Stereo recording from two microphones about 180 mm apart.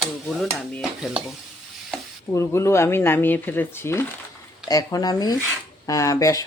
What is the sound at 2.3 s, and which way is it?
Speech, 15° left (ahead or behind).